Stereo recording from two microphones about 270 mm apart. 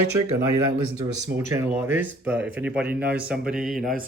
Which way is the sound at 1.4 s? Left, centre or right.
Centre.